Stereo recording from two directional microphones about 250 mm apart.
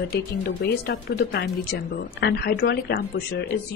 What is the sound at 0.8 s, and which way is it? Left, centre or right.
A woman's voice, left.